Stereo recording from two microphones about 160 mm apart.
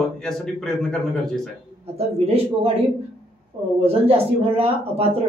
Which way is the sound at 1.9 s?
40° right (ahead or behind).